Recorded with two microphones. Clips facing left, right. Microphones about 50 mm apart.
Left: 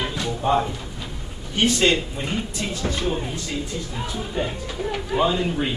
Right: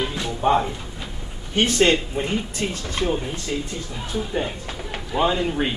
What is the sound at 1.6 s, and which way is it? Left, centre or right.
Speech, right.